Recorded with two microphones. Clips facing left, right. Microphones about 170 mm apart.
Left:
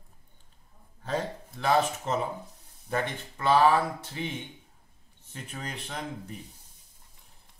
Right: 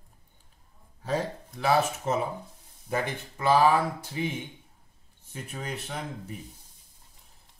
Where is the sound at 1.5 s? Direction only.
5° right (ahead or behind).